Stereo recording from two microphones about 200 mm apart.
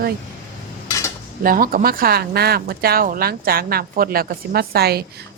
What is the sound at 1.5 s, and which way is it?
A woman's voice, 45° right (ahead or behind).